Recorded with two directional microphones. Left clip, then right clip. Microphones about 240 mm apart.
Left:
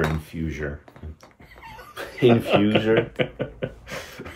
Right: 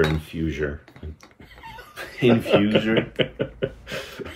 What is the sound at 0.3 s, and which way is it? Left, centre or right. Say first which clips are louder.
Speech: right 4 dB; centre.